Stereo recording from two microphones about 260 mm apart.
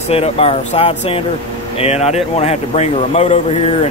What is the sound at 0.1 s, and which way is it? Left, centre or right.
Speech, left.